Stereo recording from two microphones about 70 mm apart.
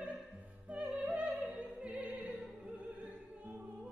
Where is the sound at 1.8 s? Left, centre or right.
Centre.